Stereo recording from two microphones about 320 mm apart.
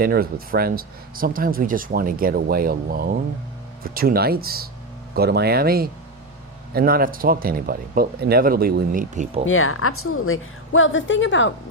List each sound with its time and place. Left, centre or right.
0.0 s speech: right
9.5 s a woman's voice: left